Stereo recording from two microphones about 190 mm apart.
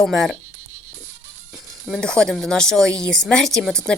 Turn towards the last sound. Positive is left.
turn(degrees=0)  # may be behind; listen again after turning